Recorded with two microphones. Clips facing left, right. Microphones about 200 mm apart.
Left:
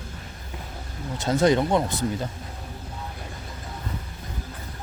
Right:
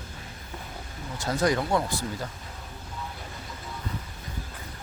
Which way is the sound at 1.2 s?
25° left (ahead or behind).